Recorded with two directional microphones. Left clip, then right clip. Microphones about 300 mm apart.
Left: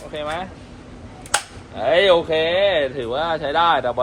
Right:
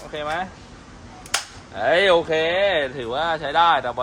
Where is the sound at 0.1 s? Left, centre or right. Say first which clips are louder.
Even; centre.